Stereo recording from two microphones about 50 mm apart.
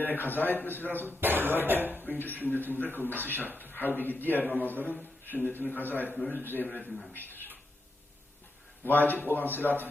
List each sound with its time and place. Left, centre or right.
0.0 s a man's voice: left
1.0 s speech: right
2.0 s a man's voice: left
8.8 s a man's voice: left